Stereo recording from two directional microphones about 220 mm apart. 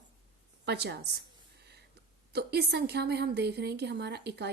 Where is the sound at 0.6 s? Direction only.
50° right (ahead or behind).